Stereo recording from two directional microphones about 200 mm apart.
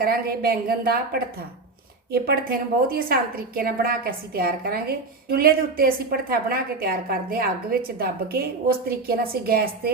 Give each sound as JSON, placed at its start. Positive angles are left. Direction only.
{"t": 0.0, "sound": "a woman's voice", "side_deg": -50}